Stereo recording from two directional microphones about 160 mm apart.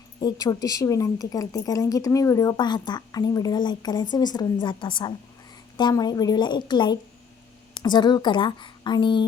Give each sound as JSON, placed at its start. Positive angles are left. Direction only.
{"t": 0.3, "sound": "a woman's voice", "side_deg": 20}